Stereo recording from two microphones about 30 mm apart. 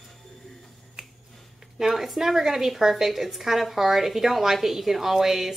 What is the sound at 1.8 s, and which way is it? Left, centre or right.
A woman's voice, centre.